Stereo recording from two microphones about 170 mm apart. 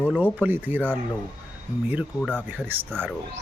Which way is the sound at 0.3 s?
10° right (ahead or behind).